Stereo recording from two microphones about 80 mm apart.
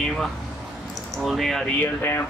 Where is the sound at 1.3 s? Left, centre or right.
Centre.